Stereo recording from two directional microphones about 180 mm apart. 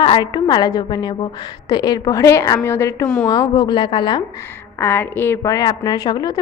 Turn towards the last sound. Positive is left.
turn(degrees=20)  # may be behind; listen again after turning